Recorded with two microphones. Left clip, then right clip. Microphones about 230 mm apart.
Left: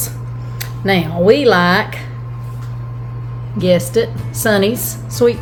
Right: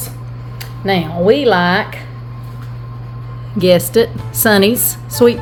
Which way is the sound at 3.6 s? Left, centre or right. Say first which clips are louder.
Right 3 dB; right.